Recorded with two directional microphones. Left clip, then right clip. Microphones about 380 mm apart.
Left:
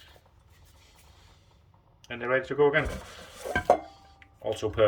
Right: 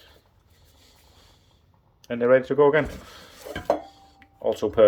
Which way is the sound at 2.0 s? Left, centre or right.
Centre.